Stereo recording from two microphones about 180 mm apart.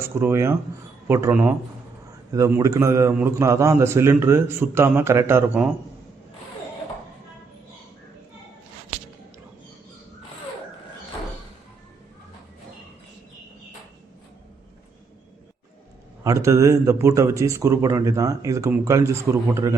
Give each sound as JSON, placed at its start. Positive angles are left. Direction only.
{"t": 0.0, "sound": "a man's voice", "side_deg": -15}
{"t": 16.2, "sound": "a man's voice", "side_deg": -15}